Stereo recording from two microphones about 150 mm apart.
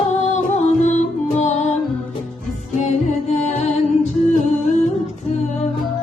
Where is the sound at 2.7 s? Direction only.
50° left (ahead or behind).